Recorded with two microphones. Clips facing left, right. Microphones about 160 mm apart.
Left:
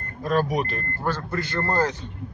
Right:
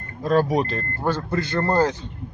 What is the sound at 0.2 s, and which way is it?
Speech, 25° right (ahead or behind).